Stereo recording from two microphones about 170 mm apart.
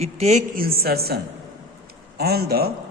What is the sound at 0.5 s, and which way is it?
A man's voice, 60° right (ahead or behind).